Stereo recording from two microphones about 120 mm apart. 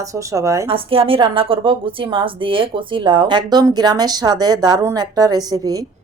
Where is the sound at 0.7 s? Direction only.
50° right (ahead or behind); by 5.8 s 30° right (ahead or behind).